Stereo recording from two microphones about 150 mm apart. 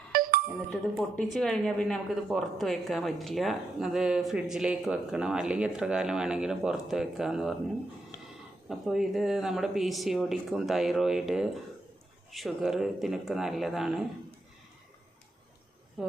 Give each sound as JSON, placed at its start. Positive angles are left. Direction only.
{"t": 0.1, "sound": "music", "side_deg": -75}
{"t": 1.3, "sound": "speech", "side_deg": 5}
{"t": 8.7, "sound": "speech", "side_deg": -5}
{"t": 16.0, "sound": "speech", "side_deg": 0}